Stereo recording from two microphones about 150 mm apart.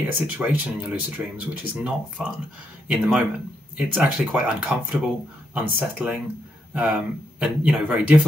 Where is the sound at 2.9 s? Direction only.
5° right (ahead or behind).